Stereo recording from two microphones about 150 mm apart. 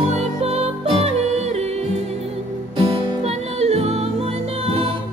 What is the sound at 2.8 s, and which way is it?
Music, 40° right (ahead or behind).